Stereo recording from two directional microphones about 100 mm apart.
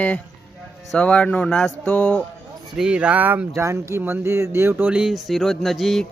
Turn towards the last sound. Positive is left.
turn(degrees=0)  # may be behind; listen again after turning